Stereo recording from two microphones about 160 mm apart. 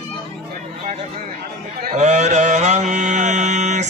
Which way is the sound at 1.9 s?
45° right (ahead or behind).